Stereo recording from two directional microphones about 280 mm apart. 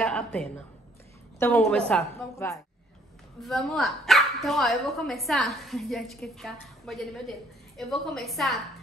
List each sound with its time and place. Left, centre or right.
0.0 s speech: centre